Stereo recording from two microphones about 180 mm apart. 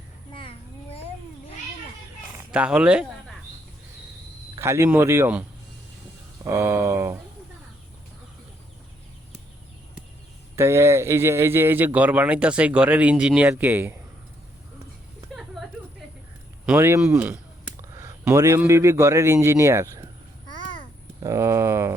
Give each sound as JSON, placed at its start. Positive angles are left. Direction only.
{"t": 0.3, "sound": "a sound", "side_deg": 30}
{"t": 2.5, "sound": "speech", "side_deg": -5}
{"t": 4.5, "sound": "speech", "side_deg": -15}
{"t": 10.5, "sound": "speech", "side_deg": -15}
{"t": 15.4, "sound": "a sound", "side_deg": 0}
{"t": 16.6, "sound": "speech", "side_deg": -15}
{"t": 17.9, "sound": "a sound", "side_deg": -20}
{"t": 18.6, "sound": "speech", "side_deg": -15}
{"t": 21.2, "sound": "speech", "side_deg": -15}